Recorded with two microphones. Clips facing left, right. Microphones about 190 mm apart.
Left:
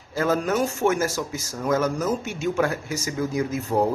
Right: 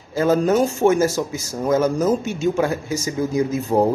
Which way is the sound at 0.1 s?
25° right (ahead or behind).